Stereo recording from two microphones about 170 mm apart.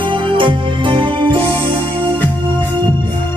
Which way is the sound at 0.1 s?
30° right (ahead or behind).